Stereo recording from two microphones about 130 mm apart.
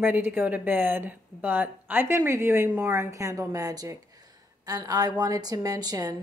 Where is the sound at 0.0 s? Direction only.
15° right (ahead or behind).